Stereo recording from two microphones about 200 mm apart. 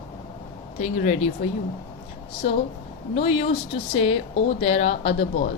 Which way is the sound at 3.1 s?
30° left (ahead or behind).